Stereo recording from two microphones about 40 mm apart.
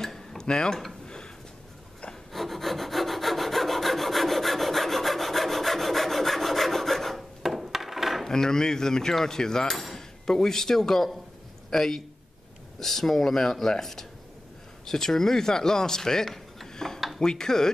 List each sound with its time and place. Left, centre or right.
0.0 s tick-tock: centre
0.5 s cutlery: centre
1.0 s a sound: centre
2.3 s rub: centre
7.6 s a sound: centre
8.2 s cutlery: centre
9.9 s speech: centre
11.7 s cutlery: centre
16.6 s dishes: centre
17.2 s cutlery: centre